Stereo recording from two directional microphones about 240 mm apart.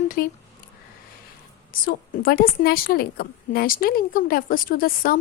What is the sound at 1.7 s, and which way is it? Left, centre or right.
A woman's voice, left.